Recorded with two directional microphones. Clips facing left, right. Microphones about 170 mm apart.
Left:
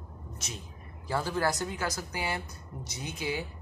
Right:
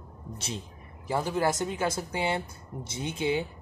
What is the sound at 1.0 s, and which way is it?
A woman's voice, 15° right (ahead or behind).